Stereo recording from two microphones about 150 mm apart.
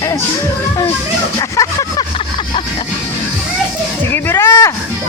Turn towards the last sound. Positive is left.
turn(degrees=20)  # may be behind; listen again after turning